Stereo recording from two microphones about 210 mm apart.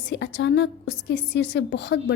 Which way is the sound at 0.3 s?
60° left (ahead or behind).